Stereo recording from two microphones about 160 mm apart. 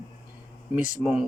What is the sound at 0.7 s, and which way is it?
Speech, centre (ahead or behind).